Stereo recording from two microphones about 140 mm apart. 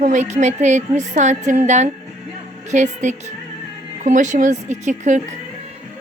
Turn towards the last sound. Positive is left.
turn(degrees=-60)  # may be behind; listen again after turning